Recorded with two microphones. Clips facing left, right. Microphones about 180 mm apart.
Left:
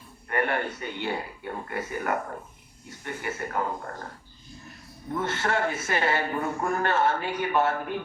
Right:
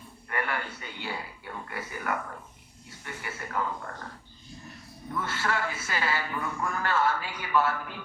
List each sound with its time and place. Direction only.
0.3 s music: 30° left (ahead or behind)
0.6 s speech: 50° left (ahead or behind)
5.2 s speech: 25° left (ahead or behind)
5.7 s speech: 50° left (ahead or behind)
6.8 s speech: 25° left (ahead or behind)